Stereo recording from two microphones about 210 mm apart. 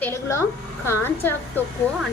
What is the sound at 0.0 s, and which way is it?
A woman's voice, 15° left (ahead or behind).